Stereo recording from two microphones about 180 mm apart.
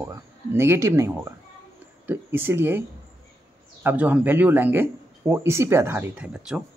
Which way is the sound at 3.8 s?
10° right (ahead or behind).